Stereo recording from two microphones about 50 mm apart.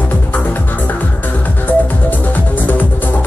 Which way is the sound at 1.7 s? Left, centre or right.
Left.